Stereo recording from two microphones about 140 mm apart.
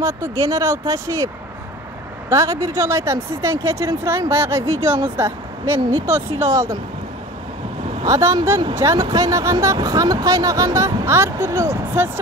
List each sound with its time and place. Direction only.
0.0 s speech: 25° right (ahead or behind)
8.1 s speech: 20° right (ahead or behind)